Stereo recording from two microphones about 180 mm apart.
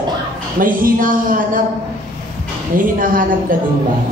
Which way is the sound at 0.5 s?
50° right (ahead or behind).